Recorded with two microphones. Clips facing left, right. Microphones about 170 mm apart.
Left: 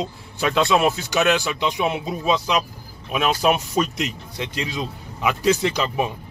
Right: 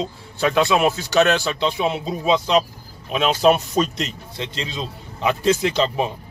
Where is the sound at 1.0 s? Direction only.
10° left (ahead or behind).